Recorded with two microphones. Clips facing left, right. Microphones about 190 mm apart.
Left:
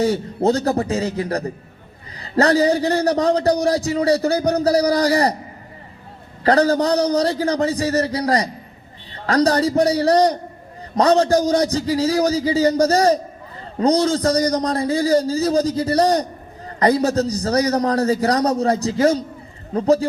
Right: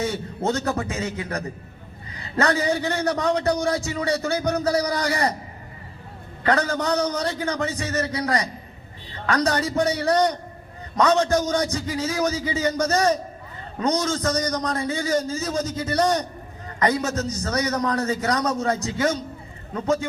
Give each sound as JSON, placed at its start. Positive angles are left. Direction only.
{"t": 0.0, "sound": "a man's voice", "side_deg": 35}
{"t": 6.4, "sound": "a man's voice", "side_deg": 35}